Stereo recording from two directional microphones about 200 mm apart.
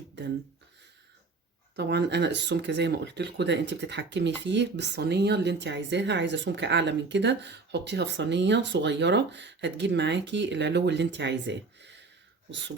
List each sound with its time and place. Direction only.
1.7 s speech: 55° right (ahead or behind)